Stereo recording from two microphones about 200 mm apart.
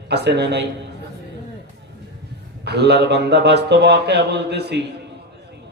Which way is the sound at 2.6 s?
55° right (ahead or behind).